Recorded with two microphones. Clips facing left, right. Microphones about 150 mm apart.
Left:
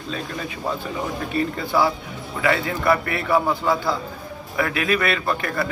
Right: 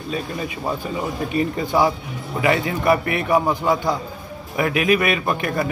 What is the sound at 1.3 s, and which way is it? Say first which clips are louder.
A man's voice: right 2 dB; 15° right (ahead or behind).